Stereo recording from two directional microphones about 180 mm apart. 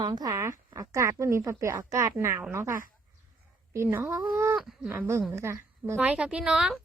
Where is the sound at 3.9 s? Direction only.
5° right (ahead or behind).